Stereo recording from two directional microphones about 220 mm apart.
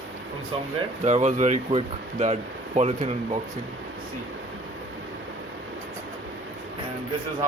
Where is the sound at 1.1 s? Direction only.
30° right (ahead or behind).